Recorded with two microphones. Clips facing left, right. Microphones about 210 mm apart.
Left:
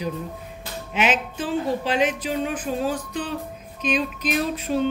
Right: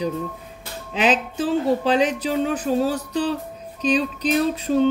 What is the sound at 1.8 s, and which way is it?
Speech, 35° right (ahead or behind).